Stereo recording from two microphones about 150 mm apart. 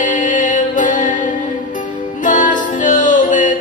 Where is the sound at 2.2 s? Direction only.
60° left (ahead or behind).